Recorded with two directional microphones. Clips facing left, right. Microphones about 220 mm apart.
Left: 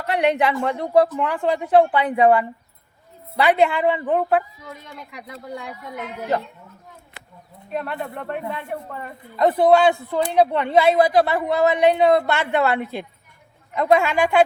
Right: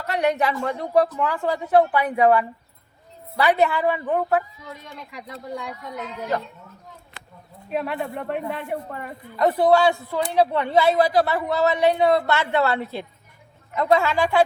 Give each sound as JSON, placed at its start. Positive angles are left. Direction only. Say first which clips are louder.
{"t": 0.0, "sound": "speech", "louder": "left 2 dB", "side_deg": 30}
{"t": 7.7, "sound": "speech", "louder": "right 2 dB", "side_deg": -5}
{"t": 9.3, "sound": "a woman's voice", "louder": "left 2 dB", "side_deg": 20}